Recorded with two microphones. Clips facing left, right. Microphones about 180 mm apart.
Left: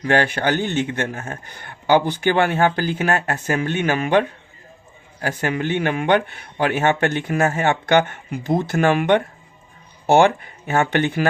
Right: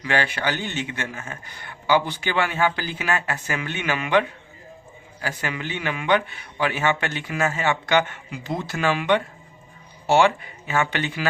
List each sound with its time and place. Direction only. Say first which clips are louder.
0.0 s speech: left 5 dB; 50° left (ahead or behind)